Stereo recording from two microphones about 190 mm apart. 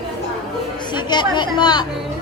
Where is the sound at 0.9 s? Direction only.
25° left (ahead or behind).